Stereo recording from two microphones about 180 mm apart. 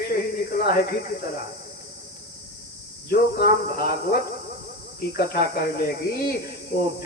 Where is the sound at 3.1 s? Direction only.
60° left (ahead or behind).